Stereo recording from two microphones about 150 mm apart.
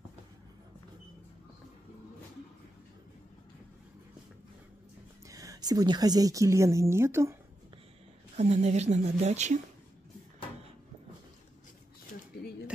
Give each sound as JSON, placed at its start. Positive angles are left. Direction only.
{"t": 5.3, "sound": "a woman's voice", "side_deg": -25}
{"t": 8.4, "sound": "speech", "side_deg": -50}